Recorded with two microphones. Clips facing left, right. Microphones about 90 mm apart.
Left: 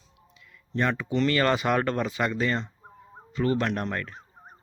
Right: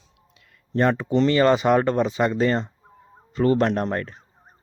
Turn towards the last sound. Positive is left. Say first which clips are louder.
# right 6 dB
turn(degrees=-30)  # may be behind; listen again after turning